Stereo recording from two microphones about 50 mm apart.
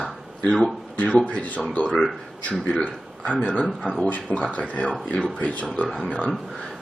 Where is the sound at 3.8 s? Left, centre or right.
Centre.